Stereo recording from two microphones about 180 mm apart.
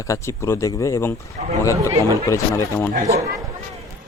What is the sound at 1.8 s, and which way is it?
Speech, 20° right (ahead or behind).